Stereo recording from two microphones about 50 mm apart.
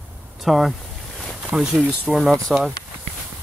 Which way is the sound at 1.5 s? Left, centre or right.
Centre.